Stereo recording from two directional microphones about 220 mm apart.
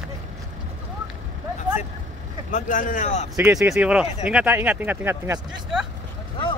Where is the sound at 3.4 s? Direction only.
15° right (ahead or behind).